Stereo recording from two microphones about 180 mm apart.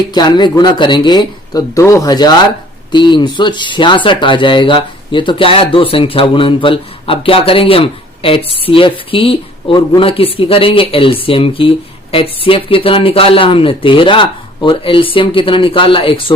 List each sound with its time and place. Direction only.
0.1 s speech: 25° left (ahead or behind)